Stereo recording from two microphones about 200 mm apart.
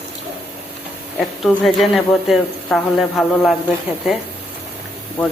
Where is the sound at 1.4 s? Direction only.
Centre (ahead or behind).